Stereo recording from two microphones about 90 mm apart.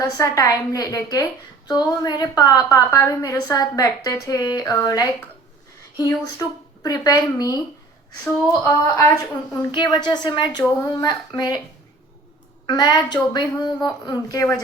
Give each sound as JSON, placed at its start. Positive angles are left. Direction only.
{"t": 0.0, "sound": "a woman's voice", "side_deg": 40}
{"t": 2.7, "sound": "a woman's voice", "side_deg": 30}
{"t": 3.1, "sound": "a woman's voice", "side_deg": 45}
{"t": 8.2, "sound": "a sound", "side_deg": 25}
{"t": 9.5, "sound": "a woman's voice", "side_deg": 45}
{"t": 12.6, "sound": "a woman's voice", "side_deg": 50}